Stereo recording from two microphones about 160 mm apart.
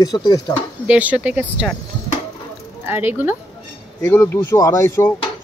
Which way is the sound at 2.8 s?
10° right (ahead or behind).